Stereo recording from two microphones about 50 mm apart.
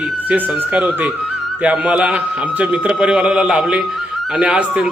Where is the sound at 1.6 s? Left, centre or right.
Right.